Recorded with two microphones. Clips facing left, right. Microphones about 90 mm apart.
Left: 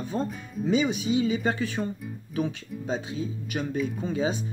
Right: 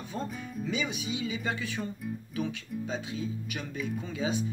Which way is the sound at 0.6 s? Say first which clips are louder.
Left 10 dB; 35° left (ahead or behind).